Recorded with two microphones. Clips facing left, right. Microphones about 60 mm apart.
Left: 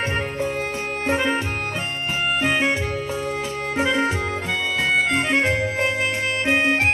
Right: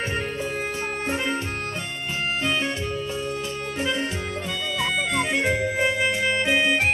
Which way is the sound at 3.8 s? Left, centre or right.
Left.